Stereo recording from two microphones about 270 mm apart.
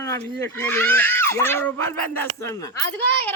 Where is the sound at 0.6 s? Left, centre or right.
Centre.